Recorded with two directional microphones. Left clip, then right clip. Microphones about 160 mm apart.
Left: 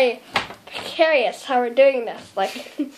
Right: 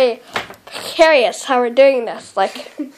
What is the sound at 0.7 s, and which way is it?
A woman's voice, 55° right (ahead or behind).